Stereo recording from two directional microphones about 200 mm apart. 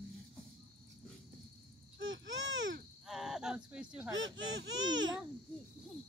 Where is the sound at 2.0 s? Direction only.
70° right (ahead or behind).